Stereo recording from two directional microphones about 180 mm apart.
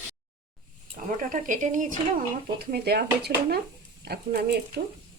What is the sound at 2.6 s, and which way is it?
Speech, 65° right (ahead or behind).